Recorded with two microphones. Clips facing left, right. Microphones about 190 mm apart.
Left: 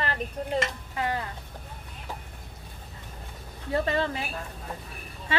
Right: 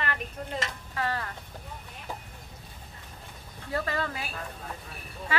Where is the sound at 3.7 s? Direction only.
25° left (ahead or behind).